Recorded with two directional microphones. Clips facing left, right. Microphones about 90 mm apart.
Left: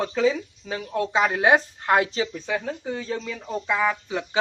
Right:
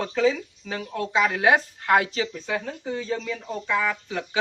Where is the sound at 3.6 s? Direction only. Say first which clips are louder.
Left 2 dB; 25° left (ahead or behind).